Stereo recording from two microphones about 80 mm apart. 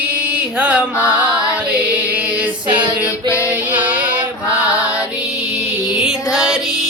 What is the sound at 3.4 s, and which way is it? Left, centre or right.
Music, centre.